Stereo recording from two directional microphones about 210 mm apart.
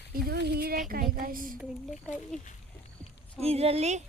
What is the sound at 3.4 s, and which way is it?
Speech, 30° right (ahead or behind).